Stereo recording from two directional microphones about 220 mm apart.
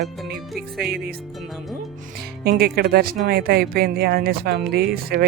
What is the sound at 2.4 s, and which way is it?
Speech, 45° right (ahead or behind).